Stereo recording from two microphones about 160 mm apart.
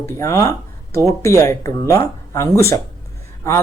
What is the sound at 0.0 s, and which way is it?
Speech, 20° left (ahead or behind).